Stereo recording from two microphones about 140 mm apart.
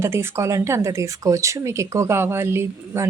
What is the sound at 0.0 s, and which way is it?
Speech, 20° right (ahead or behind).